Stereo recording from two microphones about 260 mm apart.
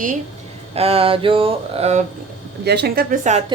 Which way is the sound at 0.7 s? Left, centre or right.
Right.